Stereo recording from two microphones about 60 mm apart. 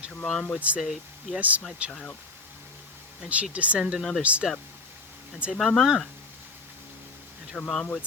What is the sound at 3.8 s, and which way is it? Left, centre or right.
Speech, centre.